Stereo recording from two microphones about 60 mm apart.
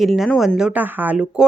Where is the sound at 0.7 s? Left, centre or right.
Right.